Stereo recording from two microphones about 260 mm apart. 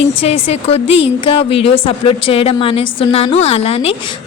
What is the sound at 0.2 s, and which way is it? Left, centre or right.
Speech, left.